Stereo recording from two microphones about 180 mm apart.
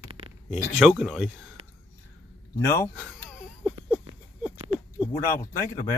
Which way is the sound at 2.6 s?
15° left (ahead or behind).